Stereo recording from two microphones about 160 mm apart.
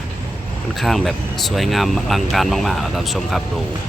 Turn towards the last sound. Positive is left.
turn(degrees=0)  # may be behind; listen again after turning